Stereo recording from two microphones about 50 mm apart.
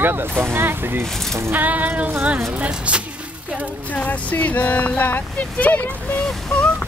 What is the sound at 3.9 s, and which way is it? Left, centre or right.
Speech, left.